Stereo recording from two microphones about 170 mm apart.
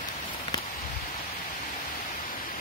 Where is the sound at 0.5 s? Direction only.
20° left (ahead or behind).